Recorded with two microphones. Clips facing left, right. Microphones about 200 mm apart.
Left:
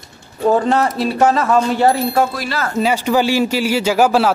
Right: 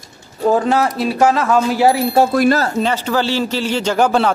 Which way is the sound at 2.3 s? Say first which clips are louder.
Right 11 dB; 50° right (ahead or behind).